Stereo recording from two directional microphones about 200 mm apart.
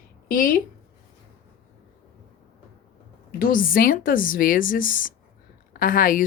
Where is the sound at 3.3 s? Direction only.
45° left (ahead or behind).